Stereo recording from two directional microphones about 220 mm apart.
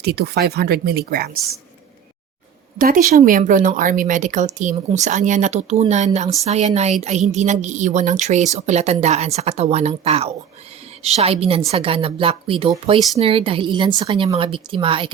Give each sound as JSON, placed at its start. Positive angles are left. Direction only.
{"t": 0.0, "sound": "speech", "side_deg": -45}
{"t": 2.7, "sound": "a woman's voice", "side_deg": -40}